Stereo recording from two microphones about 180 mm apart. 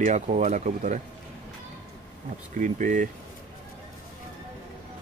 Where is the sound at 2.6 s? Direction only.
45° right (ahead or behind).